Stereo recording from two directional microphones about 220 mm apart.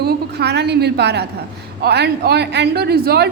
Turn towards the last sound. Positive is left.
turn(degrees=-45)  # may be behind; listen again after turning